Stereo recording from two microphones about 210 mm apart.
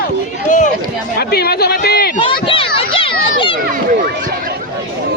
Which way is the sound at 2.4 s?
25° left (ahead or behind).